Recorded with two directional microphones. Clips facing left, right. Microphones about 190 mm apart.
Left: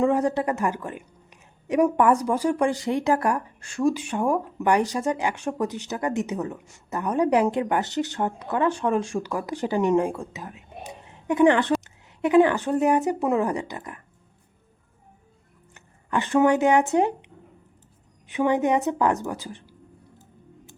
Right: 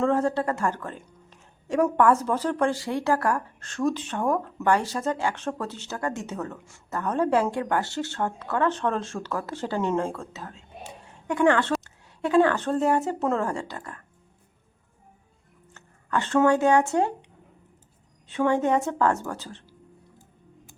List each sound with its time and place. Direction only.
0.0 s speech: 15° left (ahead or behind)
15.7 s speech: 15° left (ahead or behind)
18.3 s speech: 15° left (ahead or behind)